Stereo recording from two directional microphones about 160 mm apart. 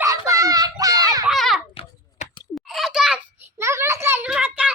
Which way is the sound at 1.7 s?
35° left (ahead or behind).